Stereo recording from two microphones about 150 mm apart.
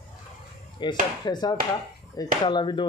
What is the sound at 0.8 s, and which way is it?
Chopping, 30° left (ahead or behind).